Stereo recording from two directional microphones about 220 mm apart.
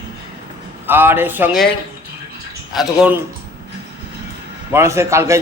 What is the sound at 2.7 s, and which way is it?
Speech, centre (ahead or behind).